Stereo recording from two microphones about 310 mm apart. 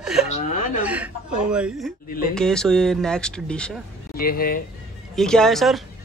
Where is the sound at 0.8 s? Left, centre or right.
Centre.